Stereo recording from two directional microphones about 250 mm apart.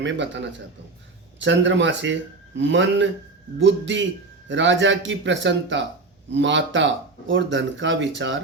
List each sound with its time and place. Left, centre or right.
0.0 s speech: right